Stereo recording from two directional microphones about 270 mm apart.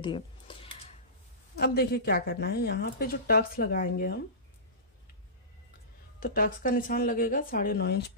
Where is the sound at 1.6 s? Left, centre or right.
Left.